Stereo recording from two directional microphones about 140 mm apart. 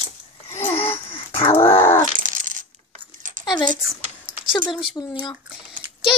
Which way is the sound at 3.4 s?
30° left (ahead or behind).